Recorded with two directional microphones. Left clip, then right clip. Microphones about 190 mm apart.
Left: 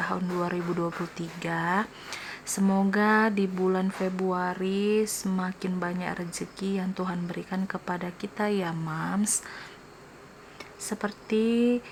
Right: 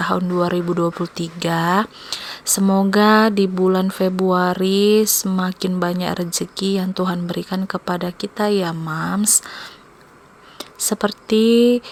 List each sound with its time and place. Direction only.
0.0 s speech: 35° right (ahead or behind)
11.6 s mantra: 5° right (ahead or behind)